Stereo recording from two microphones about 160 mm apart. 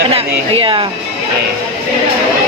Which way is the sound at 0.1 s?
35° right (ahead or behind).